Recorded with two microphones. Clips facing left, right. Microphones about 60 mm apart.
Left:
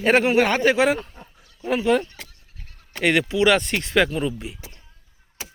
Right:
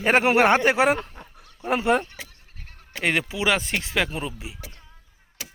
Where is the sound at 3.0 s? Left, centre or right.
Centre.